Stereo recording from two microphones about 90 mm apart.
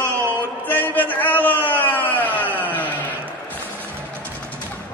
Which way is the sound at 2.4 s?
20° right (ahead or behind).